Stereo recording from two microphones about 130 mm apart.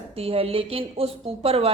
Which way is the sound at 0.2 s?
50° right (ahead or behind).